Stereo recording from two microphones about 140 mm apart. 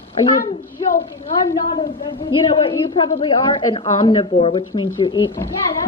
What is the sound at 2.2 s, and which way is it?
A woman's voice, 35° left (ahead or behind).